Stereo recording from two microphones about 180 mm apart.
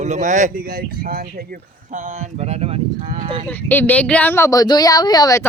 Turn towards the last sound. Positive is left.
turn(degrees=20)  # may be behind; listen again after turning